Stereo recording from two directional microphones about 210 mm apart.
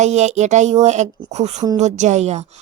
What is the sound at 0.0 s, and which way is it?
Speech, 35° right (ahead or behind).